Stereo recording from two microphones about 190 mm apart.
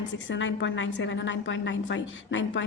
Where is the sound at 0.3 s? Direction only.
80° left.